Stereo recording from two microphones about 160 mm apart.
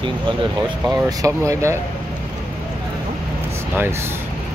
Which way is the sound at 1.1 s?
20° right (ahead or behind).